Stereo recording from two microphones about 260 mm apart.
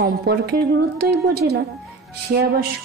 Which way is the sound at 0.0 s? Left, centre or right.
Right.